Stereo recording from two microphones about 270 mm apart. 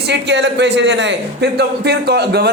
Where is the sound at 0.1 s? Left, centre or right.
Right.